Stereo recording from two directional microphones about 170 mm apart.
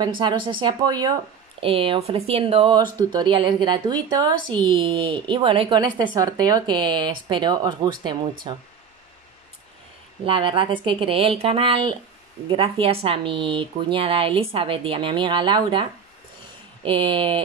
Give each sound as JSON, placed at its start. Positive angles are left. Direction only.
{"t": 0.0, "sound": "speech", "side_deg": -25}
{"t": 10.2, "sound": "speech", "side_deg": -30}